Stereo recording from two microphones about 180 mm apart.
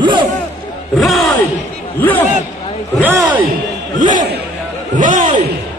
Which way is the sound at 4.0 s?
45° right (ahead or behind).